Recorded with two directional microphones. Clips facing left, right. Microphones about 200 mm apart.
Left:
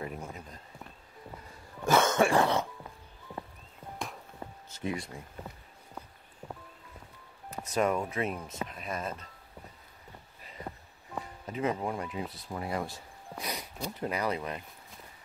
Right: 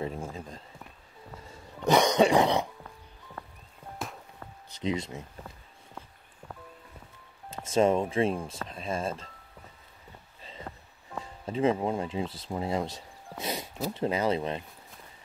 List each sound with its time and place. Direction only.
0.0 s a sound: 25° right (ahead or behind)
1.4 s throat clearing: 20° right (ahead or behind)
4.6 s speech: 20° right (ahead or behind)
7.4 s speech: 25° right (ahead or behind)
10.7 s music: 15° left (ahead or behind)
11.4 s speech: 25° right (ahead or behind)
13.4 s a sound: 25° right (ahead or behind)
13.9 s speech: 25° right (ahead or behind)